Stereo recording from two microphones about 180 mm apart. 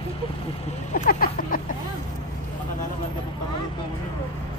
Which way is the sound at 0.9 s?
55° left (ahead or behind).